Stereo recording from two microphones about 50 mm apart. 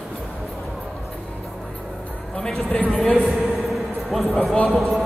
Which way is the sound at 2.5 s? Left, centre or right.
Centre.